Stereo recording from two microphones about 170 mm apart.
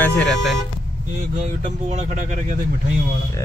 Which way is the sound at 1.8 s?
45° right (ahead or behind).